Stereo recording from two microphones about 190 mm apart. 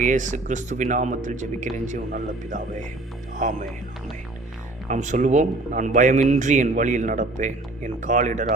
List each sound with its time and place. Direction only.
0.0 s a man's voice: 40° right (ahead or behind)
4.9 s a man's voice: 40° right (ahead or behind)